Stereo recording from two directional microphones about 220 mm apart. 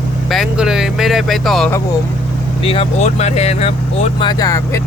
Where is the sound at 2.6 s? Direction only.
25° left (ahead or behind).